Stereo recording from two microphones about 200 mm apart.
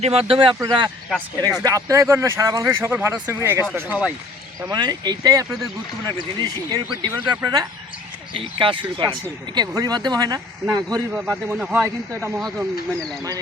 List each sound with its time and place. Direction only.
0.0 s speech: 30° right (ahead or behind); by 4.1 s 5° right (ahead or behind)
4.7 s speech: 20° right (ahead or behind)
11.1 s speech: 5° right (ahead or behind)
12.4 s speech: centre (ahead or behind)